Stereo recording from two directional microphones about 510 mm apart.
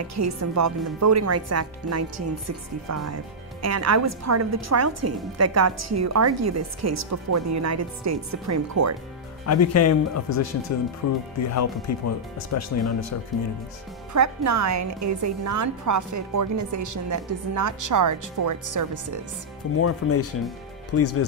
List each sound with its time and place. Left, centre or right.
0.1 s a woman's voice: right
9.5 s speech: left
14.1 s a woman's voice: right
19.8 s speech: left